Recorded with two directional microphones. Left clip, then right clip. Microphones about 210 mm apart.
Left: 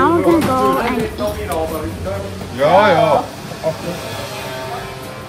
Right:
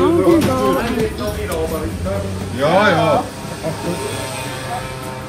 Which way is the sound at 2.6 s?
40° left (ahead or behind).